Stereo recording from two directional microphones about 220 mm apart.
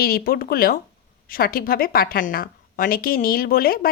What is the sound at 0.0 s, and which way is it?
A woman's voice, 45° left (ahead or behind).